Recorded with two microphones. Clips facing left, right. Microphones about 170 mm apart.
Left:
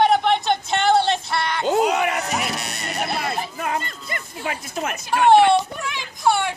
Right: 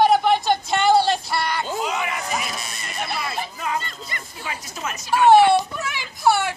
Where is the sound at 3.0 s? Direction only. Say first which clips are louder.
Left 2 dB; 50° left (ahead or behind).